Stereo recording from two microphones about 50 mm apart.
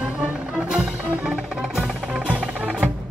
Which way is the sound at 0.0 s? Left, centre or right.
Right.